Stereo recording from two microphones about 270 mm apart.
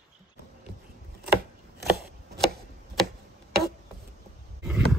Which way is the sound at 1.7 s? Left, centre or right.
Right.